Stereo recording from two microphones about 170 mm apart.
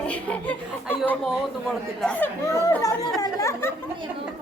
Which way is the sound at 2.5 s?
15° left (ahead or behind).